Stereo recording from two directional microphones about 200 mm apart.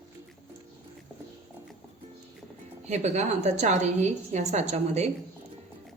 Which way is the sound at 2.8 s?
35° right (ahead or behind).